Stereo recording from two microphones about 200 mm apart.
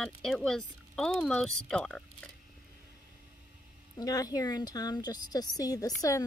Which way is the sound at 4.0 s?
20° left (ahead or behind).